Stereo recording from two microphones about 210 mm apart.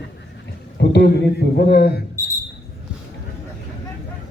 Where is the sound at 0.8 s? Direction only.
55° left (ahead or behind).